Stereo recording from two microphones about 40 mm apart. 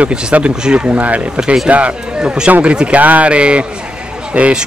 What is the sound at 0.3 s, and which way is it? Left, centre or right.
Speech, right.